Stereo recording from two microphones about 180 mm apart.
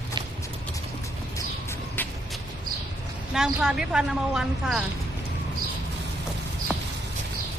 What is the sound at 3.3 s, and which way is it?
Speech, 5° right (ahead or behind).